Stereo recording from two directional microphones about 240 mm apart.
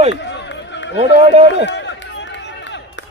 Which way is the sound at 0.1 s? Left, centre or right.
Left.